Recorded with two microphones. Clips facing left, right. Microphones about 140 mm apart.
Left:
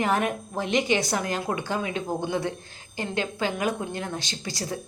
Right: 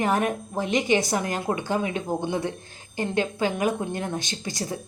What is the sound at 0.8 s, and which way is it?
A woman's voice, 15° right (ahead or behind).